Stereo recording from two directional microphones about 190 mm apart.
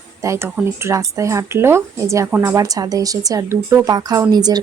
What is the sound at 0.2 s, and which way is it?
Speech, 15° right (ahead or behind).